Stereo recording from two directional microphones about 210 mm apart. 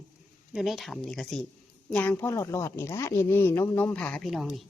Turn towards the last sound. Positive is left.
turn(degrees=0)  # may be behind; listen again after turning